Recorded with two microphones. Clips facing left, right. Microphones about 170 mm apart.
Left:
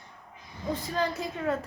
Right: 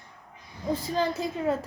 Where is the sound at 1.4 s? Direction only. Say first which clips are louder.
Right 2 dB; 20° right (ahead or behind).